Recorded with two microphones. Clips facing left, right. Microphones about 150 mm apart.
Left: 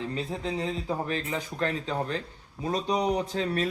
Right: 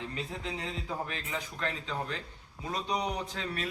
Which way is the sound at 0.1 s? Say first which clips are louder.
Left 6 dB; 35° left (ahead or behind).